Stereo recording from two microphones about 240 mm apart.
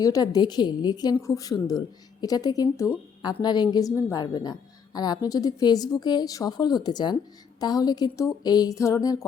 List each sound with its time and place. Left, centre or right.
0.0 s a woman's voice: centre